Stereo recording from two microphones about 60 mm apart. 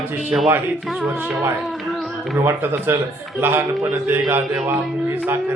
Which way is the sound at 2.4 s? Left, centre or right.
Right.